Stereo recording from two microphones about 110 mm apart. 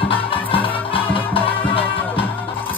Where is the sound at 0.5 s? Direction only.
55° left (ahead or behind).